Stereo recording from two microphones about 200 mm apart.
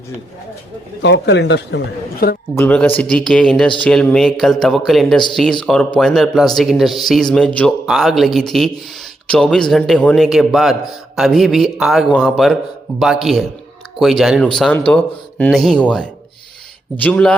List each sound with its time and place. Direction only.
1.0 s speech: 65° left (ahead or behind)
2.2 s a man's voice: 45° left (ahead or behind)
2.6 s a man's voice: 10° left (ahead or behind)